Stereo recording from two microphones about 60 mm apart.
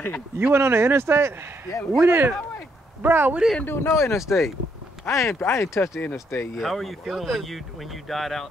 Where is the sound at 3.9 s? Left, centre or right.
Left.